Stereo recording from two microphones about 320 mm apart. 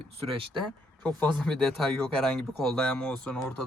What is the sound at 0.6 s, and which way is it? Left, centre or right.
Speech, centre.